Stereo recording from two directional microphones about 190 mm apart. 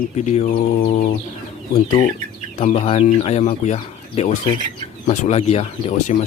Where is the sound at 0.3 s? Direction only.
35° left (ahead or behind).